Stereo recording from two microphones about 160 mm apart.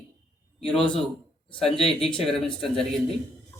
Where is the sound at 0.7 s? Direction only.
5° left (ahead or behind).